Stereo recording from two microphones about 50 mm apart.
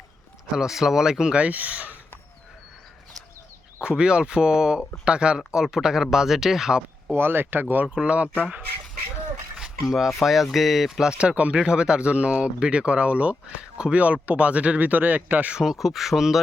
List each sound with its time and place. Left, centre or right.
0.5 s speech: centre; by 2.0 s right
3.8 s speech: centre
7.1 s speech: right
7.9 s speech: right
9.9 s speech: centre
11.2 s speech: right
15.5 s speech: centre